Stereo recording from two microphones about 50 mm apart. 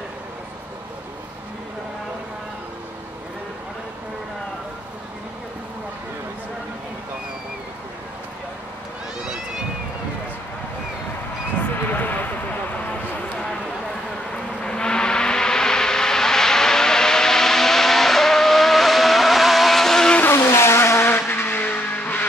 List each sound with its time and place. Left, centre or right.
11.9 s a sound: left
14.3 s vehicle: centre
20.3 s vehicle: left